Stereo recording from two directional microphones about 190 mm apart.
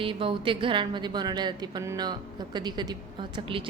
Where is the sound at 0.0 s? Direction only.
30° right (ahead or behind).